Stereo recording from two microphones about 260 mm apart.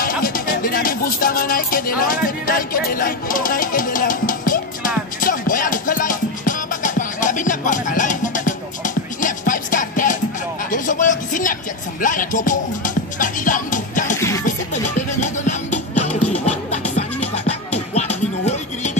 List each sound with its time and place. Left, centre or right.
0.0 s music: left
14.1 s music: centre
14.4 s music: left